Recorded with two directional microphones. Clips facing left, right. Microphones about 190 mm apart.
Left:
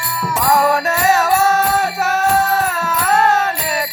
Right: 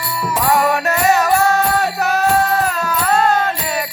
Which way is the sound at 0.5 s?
Centre (ahead or behind).